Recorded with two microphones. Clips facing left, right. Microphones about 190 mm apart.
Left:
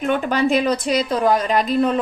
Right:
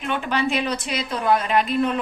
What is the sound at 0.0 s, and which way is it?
A woman's voice, 40° left (ahead or behind).